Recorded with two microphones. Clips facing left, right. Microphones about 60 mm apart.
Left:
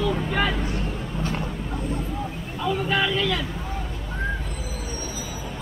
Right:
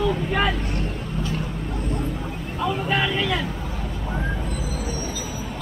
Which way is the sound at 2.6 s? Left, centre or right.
Centre.